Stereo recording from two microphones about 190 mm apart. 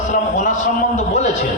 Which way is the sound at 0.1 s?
40° left (ahead or behind).